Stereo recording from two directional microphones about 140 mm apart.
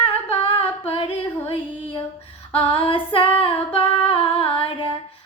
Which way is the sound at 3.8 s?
40° left (ahead or behind).